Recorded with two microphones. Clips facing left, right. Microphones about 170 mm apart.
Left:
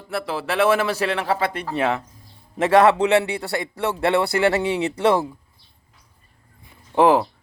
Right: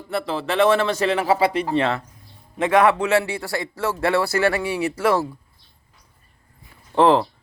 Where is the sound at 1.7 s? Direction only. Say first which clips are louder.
Right 1 dB; 10° left (ahead or behind).